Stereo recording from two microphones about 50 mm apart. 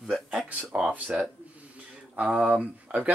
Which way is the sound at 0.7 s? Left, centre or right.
Right.